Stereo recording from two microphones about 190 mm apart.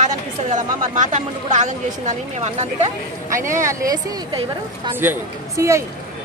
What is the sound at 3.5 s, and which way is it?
A woman's voice, 15° right (ahead or behind).